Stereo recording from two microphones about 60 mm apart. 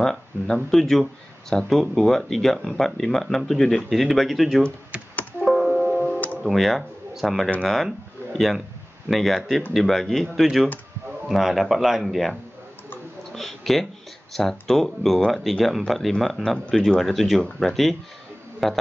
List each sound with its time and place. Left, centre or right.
0.0 s speech: centre
5.4 s music: centre
5.7 s music: centre
5.9 s music: left
6.4 s speech: centre
13.3 s a sound: centre
14.3 s speech: centre